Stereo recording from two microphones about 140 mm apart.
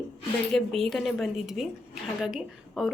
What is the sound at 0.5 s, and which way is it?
A woman's voice, centre (ahead or behind).